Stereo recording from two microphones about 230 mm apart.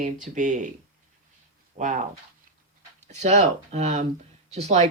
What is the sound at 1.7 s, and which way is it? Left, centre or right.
Speech, right.